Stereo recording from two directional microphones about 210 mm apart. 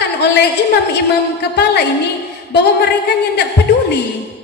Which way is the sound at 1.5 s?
55° left (ahead or behind).